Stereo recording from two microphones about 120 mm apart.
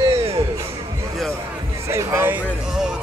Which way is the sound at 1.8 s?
20° right (ahead or behind).